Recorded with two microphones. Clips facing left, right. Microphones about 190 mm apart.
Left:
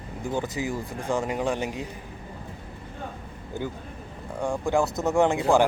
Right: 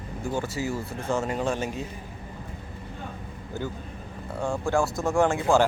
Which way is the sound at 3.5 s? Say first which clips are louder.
Left 1 dB; 15° left (ahead or behind).